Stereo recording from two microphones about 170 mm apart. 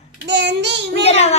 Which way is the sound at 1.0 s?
40° left (ahead or behind).